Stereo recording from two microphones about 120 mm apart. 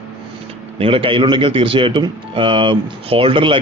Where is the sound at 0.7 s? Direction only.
50° right (ahead or behind).